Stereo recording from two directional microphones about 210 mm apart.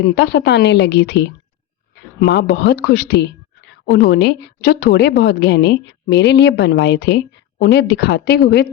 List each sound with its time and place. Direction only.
0.0 s speech: 55° left (ahead or behind)